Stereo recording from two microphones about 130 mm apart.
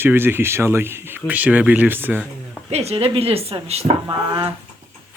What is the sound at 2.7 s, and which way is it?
A woman's voice, 55° right (ahead or behind).